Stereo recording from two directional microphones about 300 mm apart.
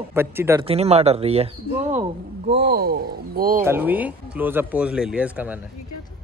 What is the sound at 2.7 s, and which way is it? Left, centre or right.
Speech, right.